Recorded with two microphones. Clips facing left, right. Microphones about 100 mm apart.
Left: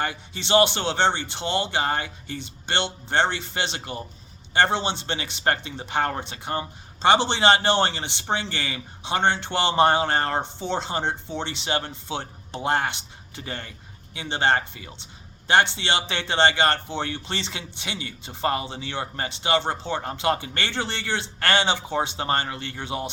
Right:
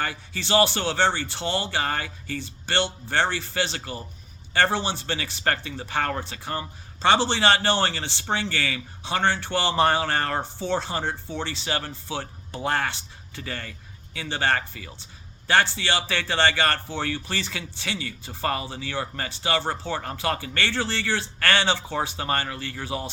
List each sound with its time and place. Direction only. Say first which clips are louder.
0.0 s speech: left 1 dB; 20° left (ahead or behind)